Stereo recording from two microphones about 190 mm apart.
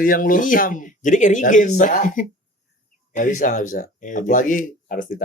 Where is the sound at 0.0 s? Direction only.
45° left (ahead or behind).